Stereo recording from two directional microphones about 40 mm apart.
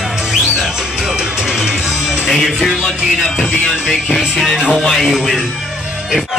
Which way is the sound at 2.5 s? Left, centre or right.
Centre.